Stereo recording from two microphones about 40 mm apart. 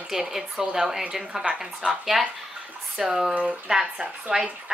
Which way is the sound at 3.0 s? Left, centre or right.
Centre.